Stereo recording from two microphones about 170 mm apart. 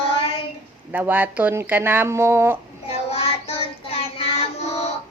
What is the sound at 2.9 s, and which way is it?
Child singing, 35° left (ahead or behind).